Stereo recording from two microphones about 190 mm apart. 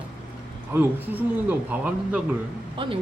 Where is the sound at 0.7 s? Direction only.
10° right (ahead or behind).